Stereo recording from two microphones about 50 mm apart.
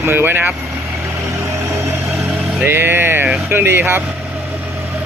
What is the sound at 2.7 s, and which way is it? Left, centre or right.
Speech, right.